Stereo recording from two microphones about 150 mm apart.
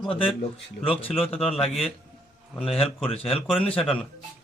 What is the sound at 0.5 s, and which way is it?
A man's voice, 40° left (ahead or behind).